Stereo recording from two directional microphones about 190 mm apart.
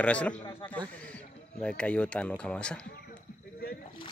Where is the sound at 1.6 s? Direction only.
5° left (ahead or behind).